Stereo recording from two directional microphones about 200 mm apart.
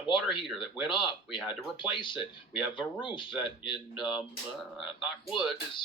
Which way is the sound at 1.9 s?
25° left (ahead or behind).